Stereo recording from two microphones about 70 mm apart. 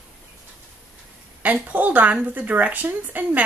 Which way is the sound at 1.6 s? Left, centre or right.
Right.